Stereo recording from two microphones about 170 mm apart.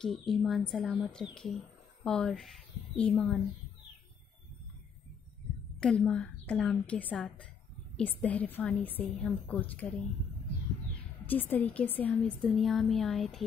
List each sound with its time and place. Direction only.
0.0 s a woman's voice: centre (ahead or behind)
5.8 s a woman's voice: 5° left (ahead or behind)
11.2 s a woman's voice: 10° left (ahead or behind)